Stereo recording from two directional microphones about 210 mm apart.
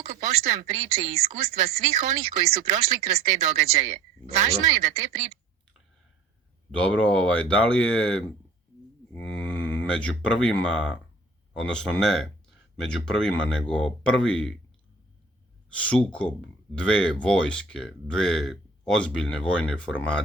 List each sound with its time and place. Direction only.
0.0 s a sound: 35° right (ahead or behind)
0.7 s a woman's voice: 30° right (ahead or behind)
6.7 s speech: 5° left (ahead or behind)
9.1 s a sound: 5° left (ahead or behind)
10.4 s speech: 5° left (ahead or behind)
15.7 s speech: 5° left (ahead or behind)